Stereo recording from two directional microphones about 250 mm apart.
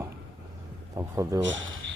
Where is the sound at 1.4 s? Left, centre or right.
Right.